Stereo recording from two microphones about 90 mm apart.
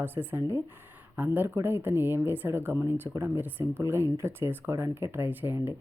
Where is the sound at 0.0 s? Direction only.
25° right (ahead or behind).